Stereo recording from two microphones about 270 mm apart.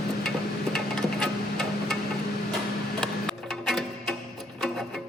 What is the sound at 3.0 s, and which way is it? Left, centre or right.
Music, centre.